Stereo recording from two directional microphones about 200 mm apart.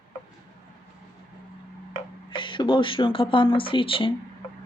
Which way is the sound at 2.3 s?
25° left (ahead or behind).